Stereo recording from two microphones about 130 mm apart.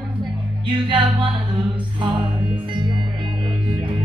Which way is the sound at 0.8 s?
40° right (ahead or behind).